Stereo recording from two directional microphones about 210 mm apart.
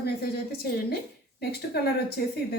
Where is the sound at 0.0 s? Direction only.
50° left (ahead or behind).